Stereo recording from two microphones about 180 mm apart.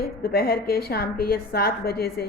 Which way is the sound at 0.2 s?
60° left (ahead or behind).